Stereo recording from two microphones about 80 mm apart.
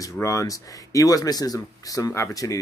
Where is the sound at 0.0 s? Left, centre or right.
Left.